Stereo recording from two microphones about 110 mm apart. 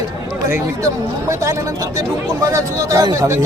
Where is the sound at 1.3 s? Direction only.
30° right (ahead or behind).